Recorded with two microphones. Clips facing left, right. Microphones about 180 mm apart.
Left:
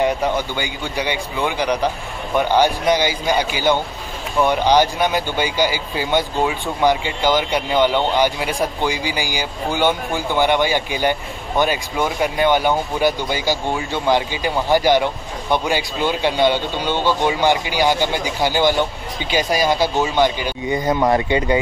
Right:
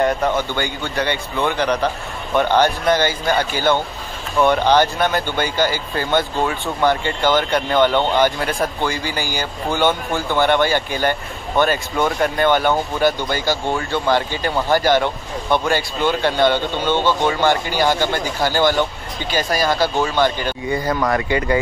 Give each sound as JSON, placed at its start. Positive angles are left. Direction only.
{"t": 0.6, "sound": "speech", "side_deg": 10}